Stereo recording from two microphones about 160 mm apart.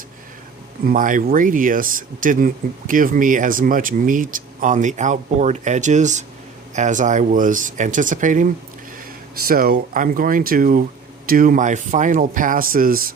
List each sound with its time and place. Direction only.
0.9 s speech: 55° right (ahead or behind)
9.5 s speech: 65° right (ahead or behind)